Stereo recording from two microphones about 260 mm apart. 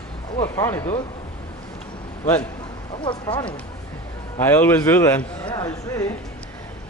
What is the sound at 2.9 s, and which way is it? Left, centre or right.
Speech, centre.